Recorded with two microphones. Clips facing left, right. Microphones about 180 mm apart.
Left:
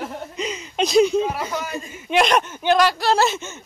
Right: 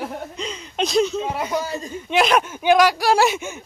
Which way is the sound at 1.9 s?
5° left (ahead or behind).